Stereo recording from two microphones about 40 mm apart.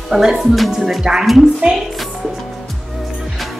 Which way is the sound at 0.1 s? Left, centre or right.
Centre.